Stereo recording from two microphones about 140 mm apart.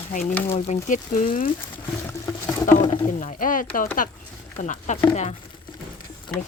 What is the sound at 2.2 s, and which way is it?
Patter, 20° left (ahead or behind).